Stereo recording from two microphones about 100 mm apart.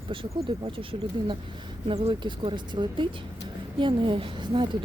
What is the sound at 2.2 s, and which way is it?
A woman's voice, 55° right (ahead or behind).